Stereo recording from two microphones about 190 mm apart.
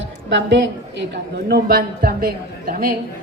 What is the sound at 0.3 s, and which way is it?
A woman's voice, 70° right (ahead or behind).